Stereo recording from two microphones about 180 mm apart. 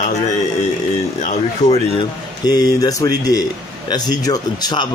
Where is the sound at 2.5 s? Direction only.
20° left (ahead or behind).